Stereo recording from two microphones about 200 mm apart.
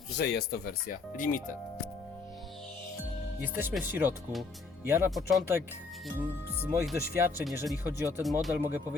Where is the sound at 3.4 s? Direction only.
10° right (ahead or behind).